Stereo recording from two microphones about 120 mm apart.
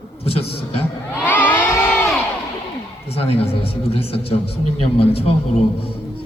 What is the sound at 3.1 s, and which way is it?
A man's voice, 55° left (ahead or behind).